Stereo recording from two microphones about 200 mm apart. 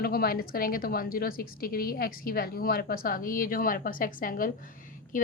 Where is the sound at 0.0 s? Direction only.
50° left (ahead or behind).